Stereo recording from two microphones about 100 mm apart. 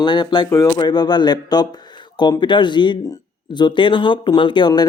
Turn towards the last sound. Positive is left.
turn(degrees=45)  # may be behind; listen again after turning